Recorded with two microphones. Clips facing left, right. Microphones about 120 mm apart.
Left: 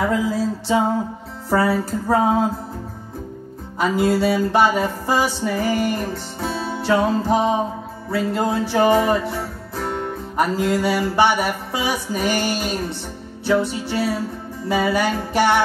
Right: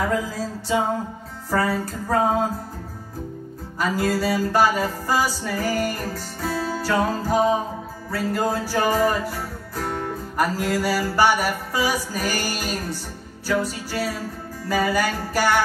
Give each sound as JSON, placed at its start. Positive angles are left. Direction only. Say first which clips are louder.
{"t": 0.1, "sound": "music", "louder": "left 4 dB", "side_deg": 30}
{"t": 3.8, "sound": "music", "louder": "left 4 dB", "side_deg": 25}